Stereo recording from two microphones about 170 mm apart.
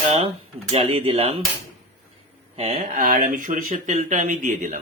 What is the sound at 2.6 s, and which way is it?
Speech, 40° right (ahead or behind).